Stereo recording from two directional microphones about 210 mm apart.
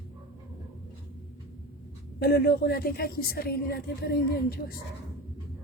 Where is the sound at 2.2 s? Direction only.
45° left (ahead or behind).